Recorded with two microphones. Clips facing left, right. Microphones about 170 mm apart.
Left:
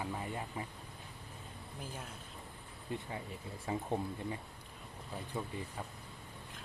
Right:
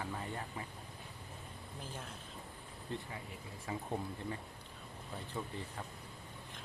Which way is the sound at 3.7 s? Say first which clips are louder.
Left 4 dB; 25° left (ahead or behind).